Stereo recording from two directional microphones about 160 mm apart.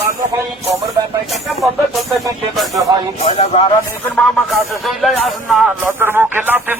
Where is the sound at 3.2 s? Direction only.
40° left (ahead or behind).